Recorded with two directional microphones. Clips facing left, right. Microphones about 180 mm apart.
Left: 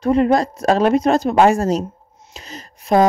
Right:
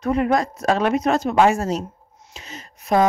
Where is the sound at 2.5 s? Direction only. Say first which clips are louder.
Left 3 dB; 35° left (ahead or behind).